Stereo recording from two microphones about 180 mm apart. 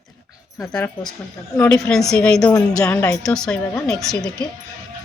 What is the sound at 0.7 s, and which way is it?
Speech, 5° left (ahead or behind).